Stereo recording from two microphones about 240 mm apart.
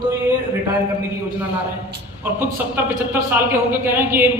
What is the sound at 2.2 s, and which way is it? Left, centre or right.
A man's voice, centre.